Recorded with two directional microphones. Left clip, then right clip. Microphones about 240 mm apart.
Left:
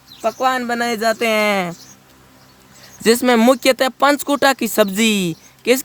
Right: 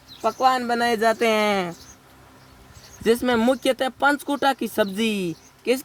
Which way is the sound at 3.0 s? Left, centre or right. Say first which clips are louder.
Left 7 dB; left.